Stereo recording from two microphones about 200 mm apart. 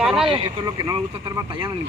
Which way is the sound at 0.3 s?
25° right (ahead or behind).